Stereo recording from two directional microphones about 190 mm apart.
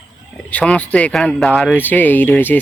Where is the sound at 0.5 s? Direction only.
5° left (ahead or behind).